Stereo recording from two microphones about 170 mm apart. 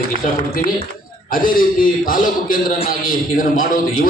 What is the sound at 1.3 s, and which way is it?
A man's voice, 55° left (ahead or behind).